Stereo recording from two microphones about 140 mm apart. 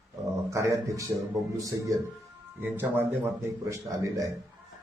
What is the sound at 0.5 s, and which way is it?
Speech, 25° right (ahead or behind).